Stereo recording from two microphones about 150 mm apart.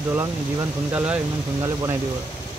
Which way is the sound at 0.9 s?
10° right (ahead or behind).